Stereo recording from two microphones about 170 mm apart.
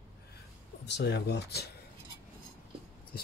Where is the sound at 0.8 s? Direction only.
85° left.